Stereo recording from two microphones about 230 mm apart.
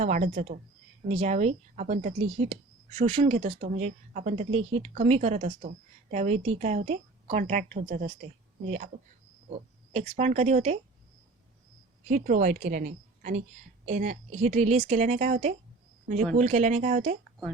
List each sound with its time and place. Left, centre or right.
0.0 s a woman's voice: right
9.9 s speech: right
12.0 s a woman's voice: right